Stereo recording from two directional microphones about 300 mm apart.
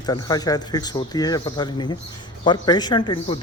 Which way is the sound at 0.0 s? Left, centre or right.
Centre.